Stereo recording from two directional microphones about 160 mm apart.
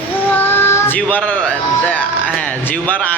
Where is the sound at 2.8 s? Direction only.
10° left (ahead or behind).